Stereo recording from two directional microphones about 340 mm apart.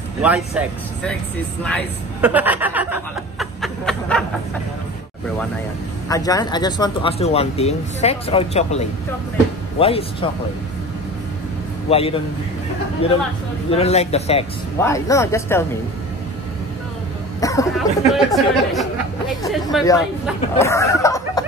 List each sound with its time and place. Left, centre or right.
0.6 s speech: centre
1.6 s chuckle: centre
6.0 s speech: centre
11.9 s speech: centre
17.4 s speech: centre
19.9 s speech: centre